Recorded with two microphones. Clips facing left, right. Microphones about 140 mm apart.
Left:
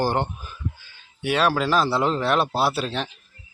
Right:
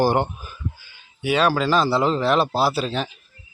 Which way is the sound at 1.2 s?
Centre (ahead or behind).